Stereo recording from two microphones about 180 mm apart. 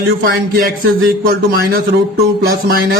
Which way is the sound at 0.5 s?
60° right (ahead or behind).